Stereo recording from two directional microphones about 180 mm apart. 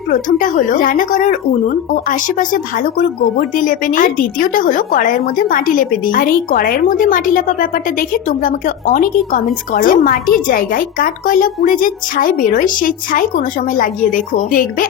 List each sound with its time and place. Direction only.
0.1 s a woman's voice: 45° left (ahead or behind)